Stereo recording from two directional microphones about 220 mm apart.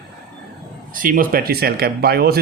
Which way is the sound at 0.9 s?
40° right (ahead or behind).